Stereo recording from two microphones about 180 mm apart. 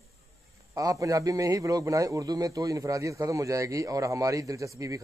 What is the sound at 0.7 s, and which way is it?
A man's voice, 20° right (ahead or behind).